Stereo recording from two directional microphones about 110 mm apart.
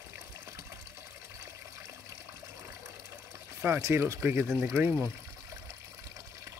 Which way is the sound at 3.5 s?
25° right (ahead or behind).